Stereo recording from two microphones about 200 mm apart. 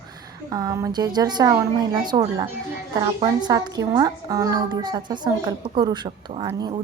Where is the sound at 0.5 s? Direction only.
15° right (ahead or behind).